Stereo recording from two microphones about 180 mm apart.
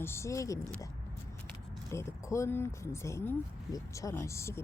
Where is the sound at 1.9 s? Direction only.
15° left (ahead or behind).